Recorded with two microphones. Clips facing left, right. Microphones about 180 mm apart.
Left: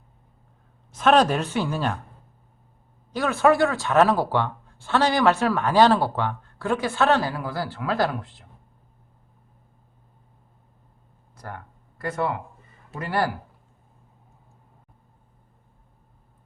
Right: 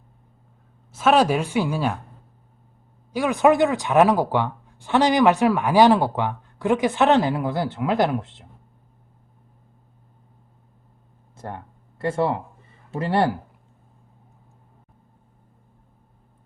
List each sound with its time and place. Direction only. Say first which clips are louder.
0.9 s speech: right 1 dB; 10° right (ahead or behind)
3.1 s speech: right 2 dB; 15° right (ahead or behind)
11.3 s speech: right 4 dB; 25° right (ahead or behind)